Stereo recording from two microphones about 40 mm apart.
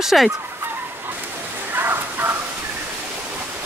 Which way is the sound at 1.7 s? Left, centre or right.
Right.